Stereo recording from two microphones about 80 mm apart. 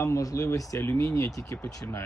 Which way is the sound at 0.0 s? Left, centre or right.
Left.